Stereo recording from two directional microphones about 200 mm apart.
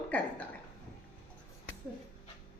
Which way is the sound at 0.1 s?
10° left (ahead or behind).